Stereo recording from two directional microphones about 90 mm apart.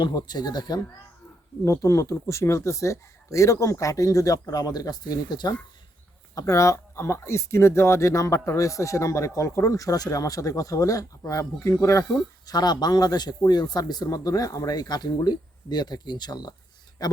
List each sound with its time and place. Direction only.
0.0 s speech: 50° left (ahead or behind)
1.6 s speech: 35° left (ahead or behind)
6.3 s speech: 35° left (ahead or behind)
12.5 s speech: 50° left (ahead or behind)